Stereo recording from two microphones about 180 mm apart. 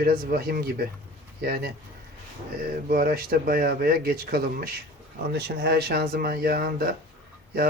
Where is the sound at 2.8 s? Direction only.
55° right (ahead or behind).